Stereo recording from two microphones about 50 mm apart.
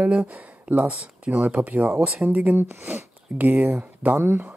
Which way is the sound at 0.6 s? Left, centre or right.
Right.